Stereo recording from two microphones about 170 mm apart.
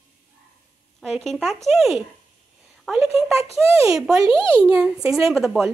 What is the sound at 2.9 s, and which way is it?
Speech, 15° right (ahead or behind).